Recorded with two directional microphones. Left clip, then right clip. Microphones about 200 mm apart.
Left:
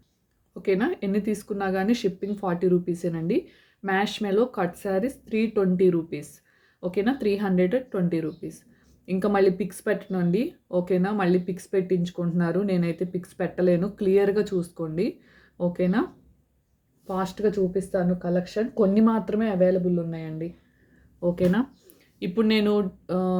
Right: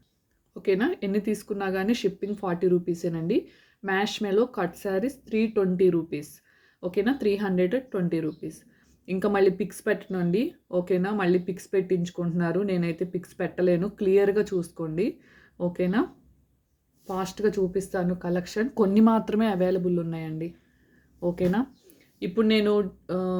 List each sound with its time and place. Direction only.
0.5 s speech: centre (ahead or behind)
17.1 s speech: 5° right (ahead or behind)
21.2 s speech: centre (ahead or behind)